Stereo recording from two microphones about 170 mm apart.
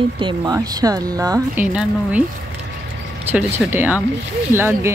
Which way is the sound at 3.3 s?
10° right (ahead or behind).